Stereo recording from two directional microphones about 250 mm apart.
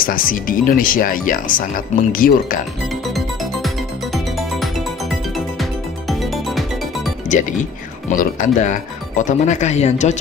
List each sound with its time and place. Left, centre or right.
0.0 s speech: left
3.2 s music: centre
7.3 s speech: left